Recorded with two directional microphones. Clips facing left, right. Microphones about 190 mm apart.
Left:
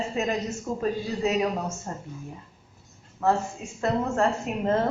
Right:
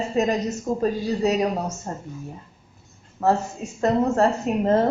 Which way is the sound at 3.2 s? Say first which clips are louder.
Right 3 dB; 40° right (ahead or behind).